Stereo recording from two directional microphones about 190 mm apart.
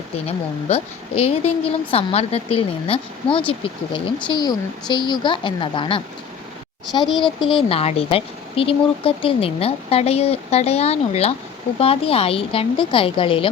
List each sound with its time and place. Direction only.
0.3 s a woman's voice: 30° left (ahead or behind)